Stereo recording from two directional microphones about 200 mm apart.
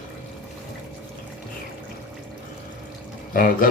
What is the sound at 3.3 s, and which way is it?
Speech, 45° left (ahead or behind).